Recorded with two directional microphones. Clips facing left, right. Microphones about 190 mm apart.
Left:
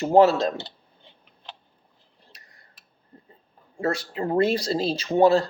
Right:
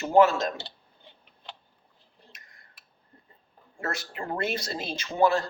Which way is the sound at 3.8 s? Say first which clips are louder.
Left 8 dB; 30° left (ahead or behind).